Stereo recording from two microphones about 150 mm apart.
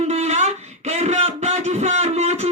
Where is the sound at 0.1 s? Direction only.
50° right (ahead or behind).